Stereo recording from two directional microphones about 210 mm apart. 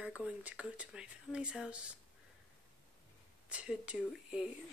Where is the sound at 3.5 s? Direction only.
5° right (ahead or behind).